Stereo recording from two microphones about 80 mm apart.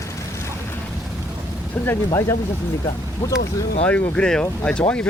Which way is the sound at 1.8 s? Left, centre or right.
Left.